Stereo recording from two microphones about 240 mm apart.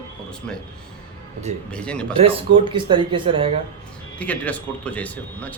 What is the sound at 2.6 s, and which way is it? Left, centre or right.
Speech, right.